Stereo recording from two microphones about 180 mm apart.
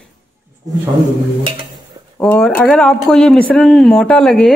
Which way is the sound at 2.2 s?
5° left (ahead or behind).